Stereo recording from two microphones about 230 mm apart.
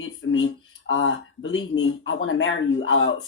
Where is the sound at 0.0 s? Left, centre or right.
Left.